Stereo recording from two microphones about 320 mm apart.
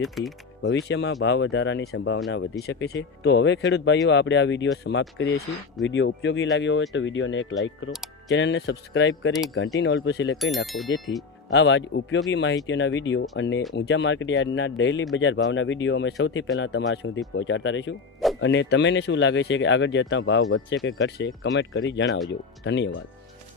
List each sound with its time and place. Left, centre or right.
0.0 s speech: centre
0.6 s speech: left
10.3 s speech: centre
11.5 s speech: left